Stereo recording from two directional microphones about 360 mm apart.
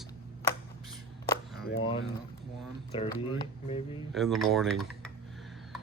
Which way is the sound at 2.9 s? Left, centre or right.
Centre.